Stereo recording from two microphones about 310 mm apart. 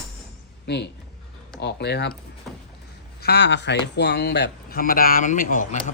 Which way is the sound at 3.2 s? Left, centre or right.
Left.